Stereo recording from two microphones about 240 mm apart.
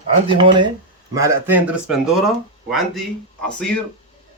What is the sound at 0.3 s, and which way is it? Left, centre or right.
Speech, centre.